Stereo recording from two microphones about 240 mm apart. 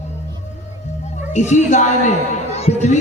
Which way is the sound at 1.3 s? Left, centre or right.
Left.